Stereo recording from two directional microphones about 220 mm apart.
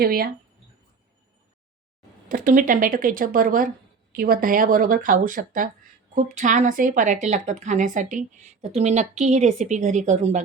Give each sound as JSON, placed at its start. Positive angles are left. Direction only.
{"t": 0.0, "sound": "speech", "side_deg": -45}
{"t": 2.3, "sound": "a woman's voice", "side_deg": -40}